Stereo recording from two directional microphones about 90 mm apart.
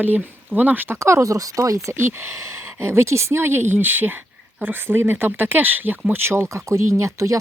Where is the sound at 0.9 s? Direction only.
30° right (ahead or behind).